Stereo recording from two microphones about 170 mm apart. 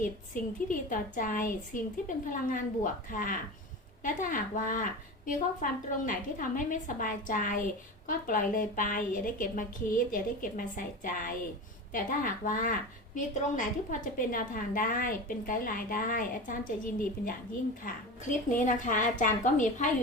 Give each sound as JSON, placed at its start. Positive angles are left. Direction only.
{"t": 0.7, "sound": "a woman's voice", "side_deg": 50}
{"t": 18.5, "sound": "a woman's voice", "side_deg": 50}